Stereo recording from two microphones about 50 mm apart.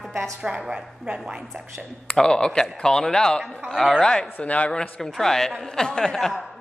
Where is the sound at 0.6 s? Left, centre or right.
Centre.